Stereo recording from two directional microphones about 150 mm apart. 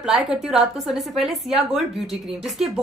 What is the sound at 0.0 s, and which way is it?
A woman's voice, 5° right (ahead or behind).